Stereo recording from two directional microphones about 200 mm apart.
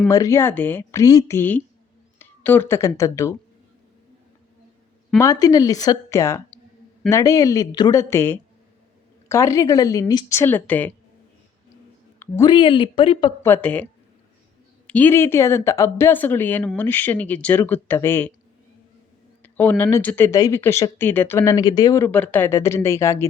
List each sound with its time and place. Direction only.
0.1 s speech: 15° left (ahead or behind)
5.1 s speech: 15° left (ahead or behind)
12.2 s speech: 20° left (ahead or behind)
13.4 s speech: 10° left (ahead or behind)
14.8 s speech: 10° left (ahead or behind)
19.4 s speech: 10° left (ahead or behind)